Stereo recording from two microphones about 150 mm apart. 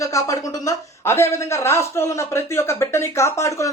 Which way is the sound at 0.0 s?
20° left (ahead or behind).